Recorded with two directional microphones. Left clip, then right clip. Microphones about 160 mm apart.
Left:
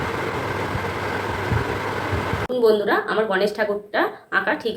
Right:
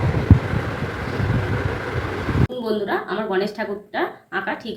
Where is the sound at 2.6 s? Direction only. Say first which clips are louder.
Left 9 dB; 20° left (ahead or behind).